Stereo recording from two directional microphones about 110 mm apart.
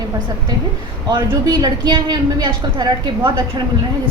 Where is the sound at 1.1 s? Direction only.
40° right (ahead or behind).